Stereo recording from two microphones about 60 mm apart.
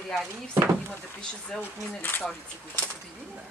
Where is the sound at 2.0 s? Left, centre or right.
Left.